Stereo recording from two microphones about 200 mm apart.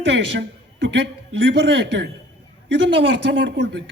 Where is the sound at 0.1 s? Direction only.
60° right (ahead or behind).